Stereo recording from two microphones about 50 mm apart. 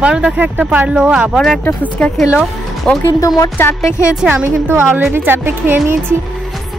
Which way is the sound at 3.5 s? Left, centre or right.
Left.